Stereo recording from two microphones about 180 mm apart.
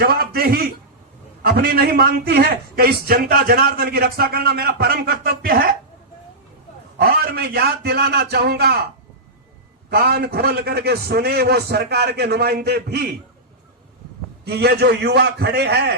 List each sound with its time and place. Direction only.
0.0 s a man's voice: 60° right (ahead or behind)
7.0 s a man's voice: 60° right (ahead or behind)
9.9 s a man's voice: 60° right (ahead or behind)
14.4 s a man's voice: 65° right (ahead or behind)